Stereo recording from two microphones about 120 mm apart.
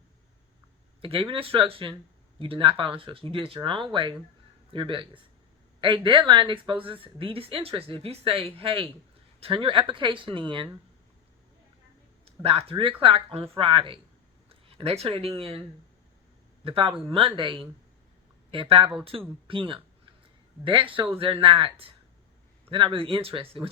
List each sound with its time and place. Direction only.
1.0 s a woman's voice: 50° right (ahead or behind)
12.2 s a woman's voice: 55° right (ahead or behind)
16.6 s a woman's voice: 50° right (ahead or behind)